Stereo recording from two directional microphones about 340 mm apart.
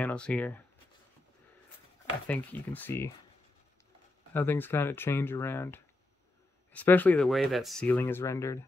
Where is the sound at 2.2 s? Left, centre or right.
Centre.